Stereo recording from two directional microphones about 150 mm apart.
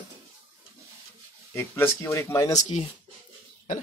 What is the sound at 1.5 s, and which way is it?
Speech, 15° left (ahead or behind).